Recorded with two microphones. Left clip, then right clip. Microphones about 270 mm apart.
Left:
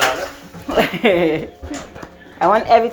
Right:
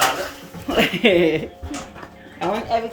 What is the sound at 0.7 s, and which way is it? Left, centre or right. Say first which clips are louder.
Speech: left 2 dB; centre.